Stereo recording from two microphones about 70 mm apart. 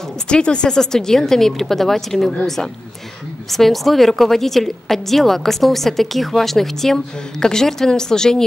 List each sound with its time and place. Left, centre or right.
0.3 s a woman's voice: centre